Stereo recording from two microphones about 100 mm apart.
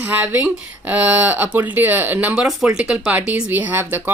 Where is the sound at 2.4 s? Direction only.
5° right (ahead or behind).